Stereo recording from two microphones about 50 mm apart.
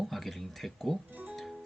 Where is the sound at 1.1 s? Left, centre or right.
Right.